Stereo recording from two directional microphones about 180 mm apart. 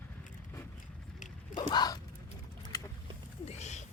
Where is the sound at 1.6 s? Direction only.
25° left (ahead or behind).